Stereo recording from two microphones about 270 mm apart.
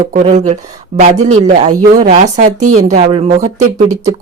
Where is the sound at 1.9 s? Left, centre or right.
Right.